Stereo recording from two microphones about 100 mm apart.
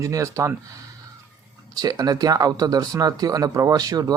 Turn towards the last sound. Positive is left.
turn(degrees=-40)  # may be behind; listen again after turning